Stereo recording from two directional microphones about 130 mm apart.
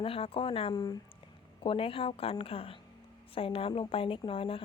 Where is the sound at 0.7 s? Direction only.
30° left (ahead or behind).